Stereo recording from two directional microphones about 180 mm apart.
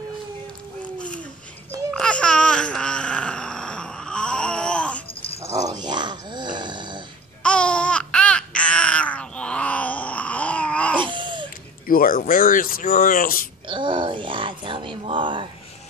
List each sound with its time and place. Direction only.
0.8 s a sound: 5° left (ahead or behind)
5.4 s snoring: 20° right (ahead or behind)
7.4 s babbling: 5° left (ahead or behind)
11.0 s baby cry: 25° right (ahead or behind)
11.9 s speech: 50° left (ahead or behind)
13.7 s groan: 25° right (ahead or behind)